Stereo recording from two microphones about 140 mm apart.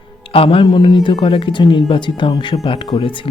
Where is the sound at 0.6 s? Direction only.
30° left (ahead or behind).